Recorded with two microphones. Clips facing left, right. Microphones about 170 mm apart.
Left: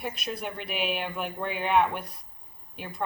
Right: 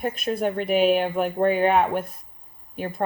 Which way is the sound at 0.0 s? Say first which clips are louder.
Right 9 dB; 45° right (ahead or behind).